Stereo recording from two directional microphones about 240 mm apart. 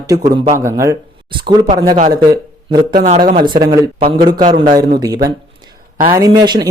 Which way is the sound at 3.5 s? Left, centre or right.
Centre.